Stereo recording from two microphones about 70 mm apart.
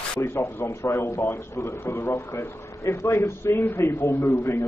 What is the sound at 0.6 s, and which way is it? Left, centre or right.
A man's voice, left.